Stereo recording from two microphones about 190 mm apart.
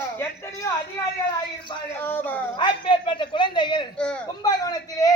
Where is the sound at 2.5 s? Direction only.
25° left (ahead or behind).